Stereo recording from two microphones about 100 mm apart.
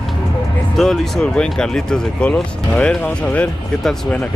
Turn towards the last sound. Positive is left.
turn(degrees=5)  # may be behind; listen again after turning